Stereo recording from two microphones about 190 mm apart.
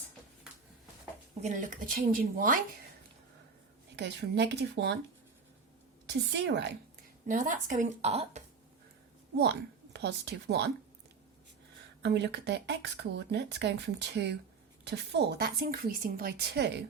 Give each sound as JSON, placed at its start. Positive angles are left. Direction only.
{"t": 1.4, "sound": "a woman's voice", "side_deg": -40}
{"t": 3.9, "sound": "speech", "side_deg": -65}
{"t": 6.3, "sound": "speech", "side_deg": -65}
{"t": 7.3, "sound": "a woman's voice", "side_deg": -40}
{"t": 9.4, "sound": "speech", "side_deg": -65}
{"t": 12.0, "sound": "a woman's voice", "side_deg": -65}